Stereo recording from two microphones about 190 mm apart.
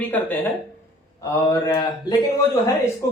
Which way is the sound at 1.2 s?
20° left (ahead or behind).